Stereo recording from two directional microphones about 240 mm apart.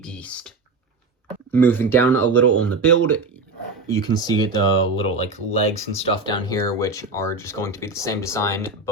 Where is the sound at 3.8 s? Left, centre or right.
Centre.